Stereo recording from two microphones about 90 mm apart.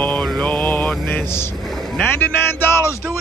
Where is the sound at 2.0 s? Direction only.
25° left (ahead or behind).